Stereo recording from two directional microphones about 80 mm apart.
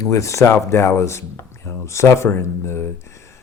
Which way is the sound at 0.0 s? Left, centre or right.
Left.